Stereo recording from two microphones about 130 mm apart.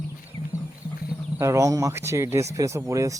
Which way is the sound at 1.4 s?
25° right (ahead or behind).